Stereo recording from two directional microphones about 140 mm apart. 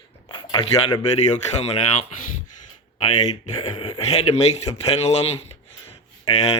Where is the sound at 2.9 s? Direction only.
50° left (ahead or behind).